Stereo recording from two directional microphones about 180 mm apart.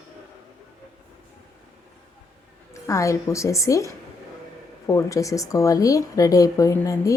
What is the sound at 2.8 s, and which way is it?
A woman's voice, 15° left (ahead or behind).